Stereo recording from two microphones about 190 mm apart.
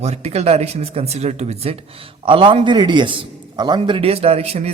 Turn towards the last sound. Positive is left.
turn(degrees=-30)  # may be behind; listen again after turning